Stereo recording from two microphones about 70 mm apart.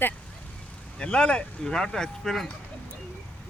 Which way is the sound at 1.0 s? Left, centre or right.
Centre.